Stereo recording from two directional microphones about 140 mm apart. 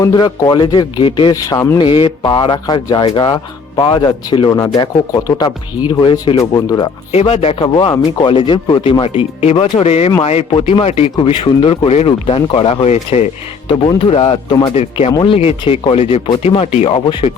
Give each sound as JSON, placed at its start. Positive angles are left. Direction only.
{"t": 0.0, "sound": "speech", "side_deg": 30}
{"t": 1.8, "sound": "speech", "side_deg": 35}
{"t": 7.1, "sound": "speech", "side_deg": 45}
{"t": 13.7, "sound": "speech", "side_deg": 40}
{"t": 14.8, "sound": "speech", "side_deg": 45}